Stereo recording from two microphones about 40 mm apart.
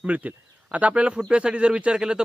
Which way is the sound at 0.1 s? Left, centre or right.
Right.